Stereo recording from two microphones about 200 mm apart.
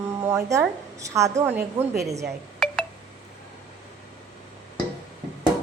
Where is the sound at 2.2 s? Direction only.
Centre (ahead or behind).